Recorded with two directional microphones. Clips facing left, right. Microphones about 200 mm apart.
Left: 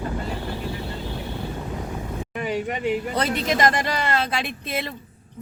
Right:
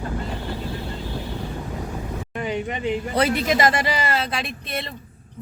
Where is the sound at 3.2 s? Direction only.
5° right (ahead or behind).